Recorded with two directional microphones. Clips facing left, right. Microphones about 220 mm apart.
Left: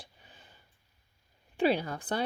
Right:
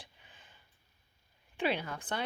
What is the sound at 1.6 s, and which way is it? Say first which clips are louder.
Speech: left 6 dB; 35° left (ahead or behind).